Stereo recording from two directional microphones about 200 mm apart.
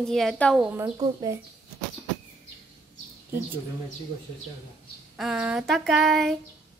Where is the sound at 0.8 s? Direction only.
20° right (ahead or behind).